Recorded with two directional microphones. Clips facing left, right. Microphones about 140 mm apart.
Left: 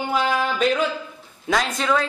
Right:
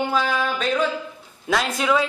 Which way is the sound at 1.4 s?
5° right (ahead or behind).